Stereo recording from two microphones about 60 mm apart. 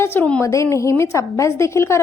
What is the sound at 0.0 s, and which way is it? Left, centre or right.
Speech, left.